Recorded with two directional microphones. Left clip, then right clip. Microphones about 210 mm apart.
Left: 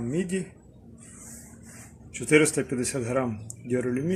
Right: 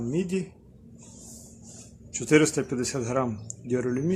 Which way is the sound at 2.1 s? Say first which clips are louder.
Even; 10° right (ahead or behind).